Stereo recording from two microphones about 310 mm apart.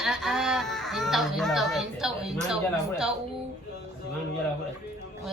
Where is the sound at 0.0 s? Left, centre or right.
Centre.